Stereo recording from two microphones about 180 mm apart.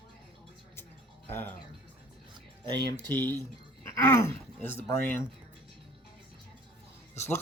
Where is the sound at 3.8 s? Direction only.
15° left (ahead or behind).